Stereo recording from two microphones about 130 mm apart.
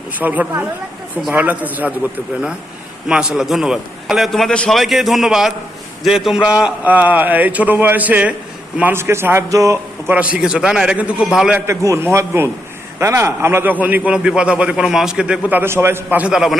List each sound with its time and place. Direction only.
0.2 s a man's voice: 10° right (ahead or behind)
3.1 s a man's voice: 5° right (ahead or behind); by 10.2 s 25° right (ahead or behind)
10.3 s a man's voice: 5° right (ahead or behind)
11.6 s a man's voice: 20° right (ahead or behind); by 16.6 s 5° right (ahead or behind)